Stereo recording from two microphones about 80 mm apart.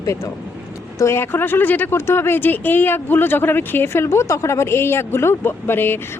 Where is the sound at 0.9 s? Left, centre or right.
Left.